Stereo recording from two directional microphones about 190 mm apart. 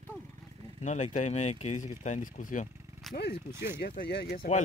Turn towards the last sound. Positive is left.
turn(degrees=35)  # may be behind; listen again after turning